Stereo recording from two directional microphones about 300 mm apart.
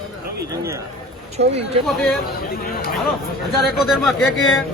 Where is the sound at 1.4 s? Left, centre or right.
Right.